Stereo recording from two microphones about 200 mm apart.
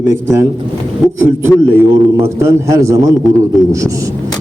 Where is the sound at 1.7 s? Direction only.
15° right (ahead or behind).